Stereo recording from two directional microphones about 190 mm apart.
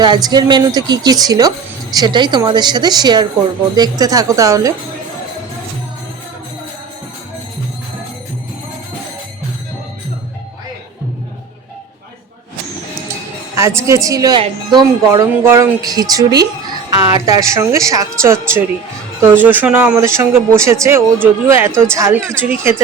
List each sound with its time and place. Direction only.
0.0 s a woman's voice: 20° right (ahead or behind)
13.6 s a woman's voice: 15° right (ahead or behind)